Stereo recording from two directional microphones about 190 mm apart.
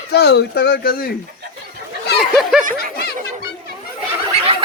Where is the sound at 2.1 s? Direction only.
Centre (ahead or behind).